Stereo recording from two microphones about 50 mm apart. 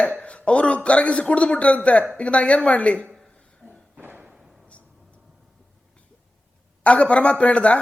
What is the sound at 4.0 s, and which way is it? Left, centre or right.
Thump, right.